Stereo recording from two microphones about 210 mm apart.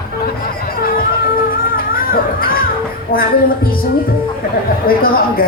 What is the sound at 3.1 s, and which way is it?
Speech, 45° left (ahead or behind).